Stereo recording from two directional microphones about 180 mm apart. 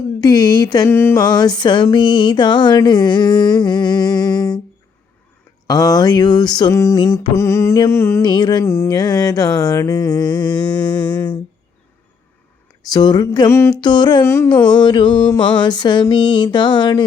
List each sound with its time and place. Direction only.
0.2 s music: 20° left (ahead or behind)
1.2 s music: 25° left (ahead or behind)
5.6 s music: 20° left (ahead or behind)
8.6 s music: 15° left (ahead or behind)
12.9 s music: 20° left (ahead or behind)
13.8 s music: 25° left (ahead or behind)
14.2 s music: 15° left (ahead or behind)
14.8 s music: 25° left (ahead or behind)